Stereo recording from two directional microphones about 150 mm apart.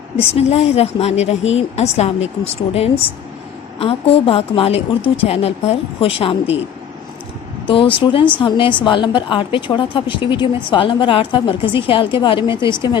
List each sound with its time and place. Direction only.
0.3 s a woman's voice: 40° left (ahead or behind)
7.7 s a woman's voice: 35° left (ahead or behind)